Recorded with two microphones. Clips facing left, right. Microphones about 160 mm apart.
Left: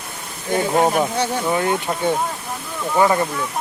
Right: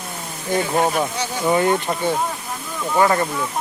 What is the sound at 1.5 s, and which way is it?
Speech, centre (ahead or behind).